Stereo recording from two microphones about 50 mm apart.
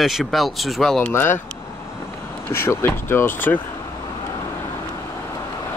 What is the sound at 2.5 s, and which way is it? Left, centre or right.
Speech, left.